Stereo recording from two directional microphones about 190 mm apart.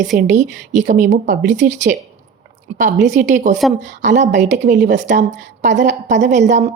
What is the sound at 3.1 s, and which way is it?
Speech, 40° right (ahead or behind).